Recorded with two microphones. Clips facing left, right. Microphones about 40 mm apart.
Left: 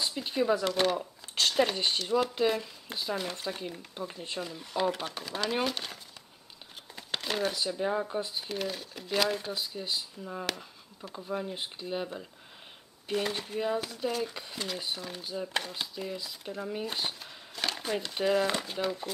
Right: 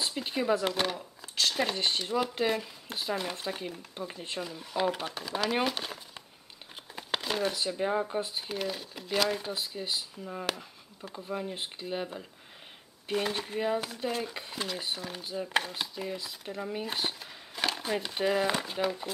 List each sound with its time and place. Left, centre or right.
0.2 s speech: centre
0.9 s a sound: left
1.5 s speech: centre
7.2 s speech: centre